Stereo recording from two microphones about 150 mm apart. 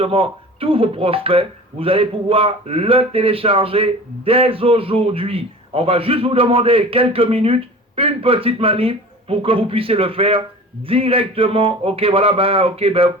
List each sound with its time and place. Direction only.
0.0 s speech: 40° right (ahead or behind)